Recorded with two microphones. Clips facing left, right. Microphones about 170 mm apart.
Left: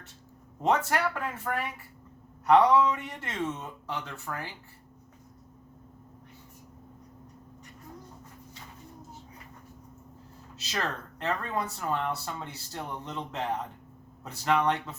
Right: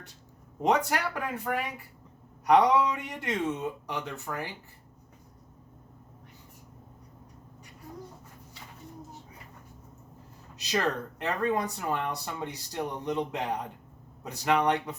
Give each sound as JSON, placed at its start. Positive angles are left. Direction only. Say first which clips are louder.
{"t": 0.6, "sound": "speech", "louder": "even", "side_deg": -15}
{"t": 11.2, "sound": "speech", "louder": "right 2 dB", "side_deg": -15}